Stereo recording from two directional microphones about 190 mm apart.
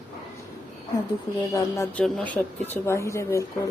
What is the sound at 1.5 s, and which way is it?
Speech, 15° left (ahead or behind).